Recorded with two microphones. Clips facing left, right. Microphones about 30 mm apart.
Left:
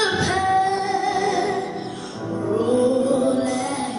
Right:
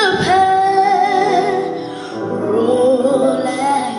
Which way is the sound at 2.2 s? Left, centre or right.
Right.